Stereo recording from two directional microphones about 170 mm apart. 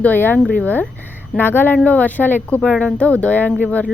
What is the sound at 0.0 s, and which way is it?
A woman's voice, 10° left (ahead or behind).